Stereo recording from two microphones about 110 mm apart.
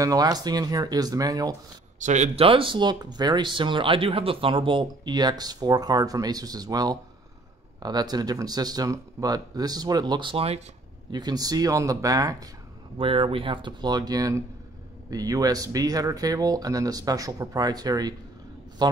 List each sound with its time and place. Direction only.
0.0 s speech: 35° right (ahead or behind)
2.0 s speech: 90° right; by 10.3 s 40° right (ahead or behind)
10.3 s speech: 65° right (ahead or behind)
11.1 s speech: 40° right (ahead or behind)
12.9 s speech: 55° right (ahead or behind)